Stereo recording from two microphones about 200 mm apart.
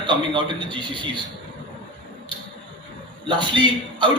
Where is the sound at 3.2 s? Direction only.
25° right (ahead or behind).